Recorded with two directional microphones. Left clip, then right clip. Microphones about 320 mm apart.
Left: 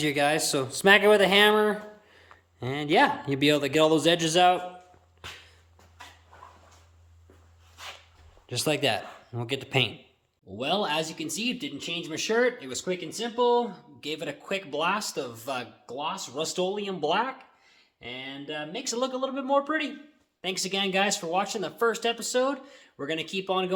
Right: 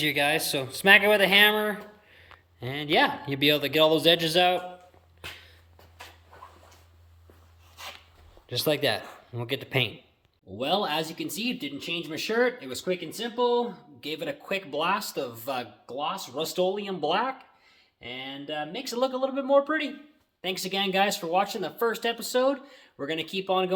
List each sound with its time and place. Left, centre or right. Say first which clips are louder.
0.0 s speech: even; centre
5.2 s dog: right 1 dB; right
8.4 s speech: right 1 dB; centre